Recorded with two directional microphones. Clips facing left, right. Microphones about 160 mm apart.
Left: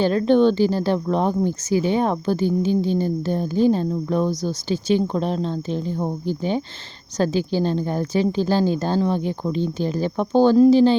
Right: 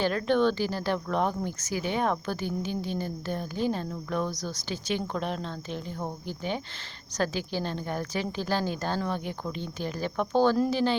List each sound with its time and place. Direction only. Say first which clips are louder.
0.0 s speech: left 8 dB; 30° left (ahead or behind)